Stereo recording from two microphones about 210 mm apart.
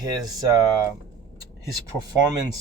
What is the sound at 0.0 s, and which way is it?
Speech, 20° right (ahead or behind).